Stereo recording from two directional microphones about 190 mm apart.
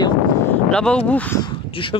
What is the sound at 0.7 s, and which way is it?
Speech, 5° left (ahead or behind).